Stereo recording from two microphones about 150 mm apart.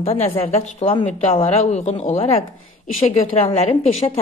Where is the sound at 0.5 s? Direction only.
45° left (ahead or behind).